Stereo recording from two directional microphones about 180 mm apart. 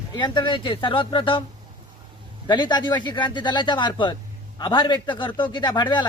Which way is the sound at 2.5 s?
25° left (ahead or behind).